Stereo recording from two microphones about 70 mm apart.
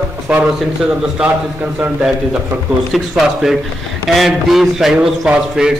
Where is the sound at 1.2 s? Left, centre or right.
Centre.